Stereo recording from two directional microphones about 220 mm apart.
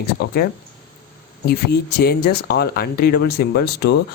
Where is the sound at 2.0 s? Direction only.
45° left (ahead or behind).